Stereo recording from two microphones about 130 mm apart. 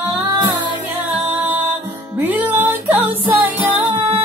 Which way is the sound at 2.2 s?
15° right (ahead or behind).